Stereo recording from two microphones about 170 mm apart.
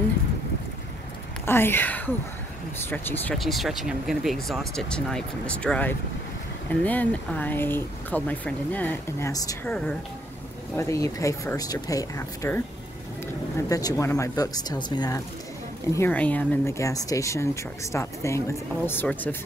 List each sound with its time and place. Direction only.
1.4 s speech: 15° left (ahead or behind)
3.3 s speech: centre (ahead or behind); by 9.8 s 20° left (ahead or behind)
10.8 s speech: 20° left (ahead or behind)
15.9 s speech: 10° left (ahead or behind)